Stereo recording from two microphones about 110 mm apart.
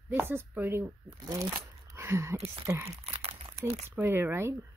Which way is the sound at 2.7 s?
30° right (ahead or behind).